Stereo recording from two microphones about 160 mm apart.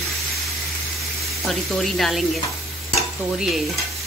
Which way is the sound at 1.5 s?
Centre (ahead or behind).